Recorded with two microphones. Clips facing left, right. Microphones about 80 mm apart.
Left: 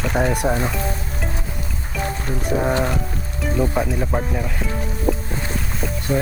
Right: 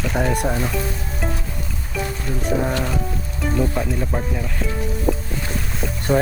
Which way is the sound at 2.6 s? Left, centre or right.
Left.